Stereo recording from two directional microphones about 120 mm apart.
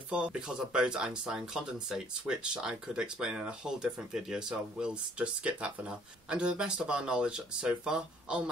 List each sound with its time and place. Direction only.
0.1 s speech: 10° right (ahead or behind)